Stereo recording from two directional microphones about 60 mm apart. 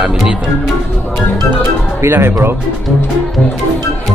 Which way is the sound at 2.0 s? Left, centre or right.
Right.